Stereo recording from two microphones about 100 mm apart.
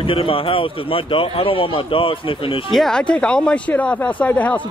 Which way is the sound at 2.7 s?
5° left (ahead or behind).